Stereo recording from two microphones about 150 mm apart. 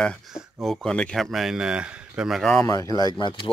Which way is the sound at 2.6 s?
20° left (ahead or behind).